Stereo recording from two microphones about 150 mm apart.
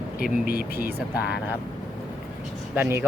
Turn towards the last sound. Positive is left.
turn(degrees=-15)  # may be behind; listen again after turning